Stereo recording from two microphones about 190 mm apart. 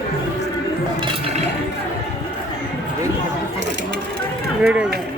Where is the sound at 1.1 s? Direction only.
30° right (ahead or behind).